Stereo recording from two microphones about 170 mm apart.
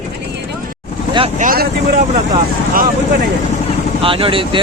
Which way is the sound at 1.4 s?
55° right (ahead or behind).